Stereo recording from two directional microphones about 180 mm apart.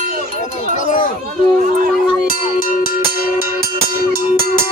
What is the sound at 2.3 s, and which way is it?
Music, 50° left (ahead or behind).